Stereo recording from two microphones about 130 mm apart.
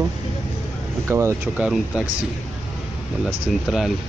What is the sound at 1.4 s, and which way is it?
Speech, 10° right (ahead or behind).